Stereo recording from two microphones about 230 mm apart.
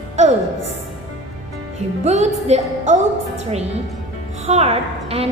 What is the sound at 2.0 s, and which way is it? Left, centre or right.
A woman's voice, right.